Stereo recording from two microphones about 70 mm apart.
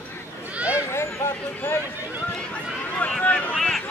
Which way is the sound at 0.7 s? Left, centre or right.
Left.